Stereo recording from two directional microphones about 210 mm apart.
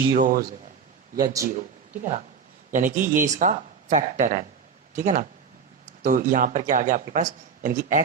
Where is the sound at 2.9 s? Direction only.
40° right (ahead or behind).